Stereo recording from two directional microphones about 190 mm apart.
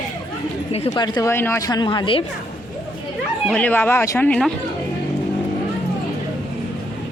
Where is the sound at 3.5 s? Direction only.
10° left (ahead or behind).